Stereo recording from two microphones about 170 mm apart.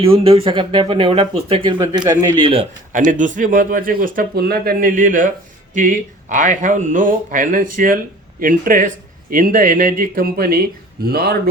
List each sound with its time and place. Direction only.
0.0 s speech: 35° right (ahead or behind)
2.0 s speech: 20° right (ahead or behind)
2.9 s speech: 50° right (ahead or behind)